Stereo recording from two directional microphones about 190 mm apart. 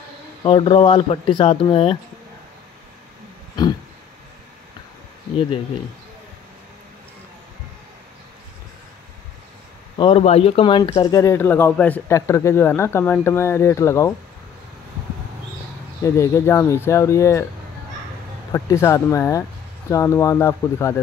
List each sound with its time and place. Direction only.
0.4 s speech: 25° left (ahead or behind)
9.9 s speech: 30° left (ahead or behind)
16.0 s speech: 15° left (ahead or behind)
18.5 s speech: 15° left (ahead or behind)